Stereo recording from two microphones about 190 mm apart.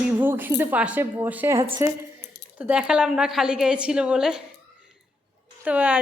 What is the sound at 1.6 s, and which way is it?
Speech, 30° right (ahead or behind).